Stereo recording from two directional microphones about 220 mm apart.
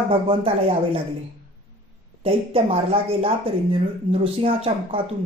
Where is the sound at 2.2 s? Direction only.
25° right (ahead or behind).